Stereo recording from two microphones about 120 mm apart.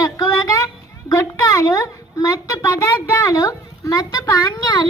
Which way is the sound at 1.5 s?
30° left (ahead or behind).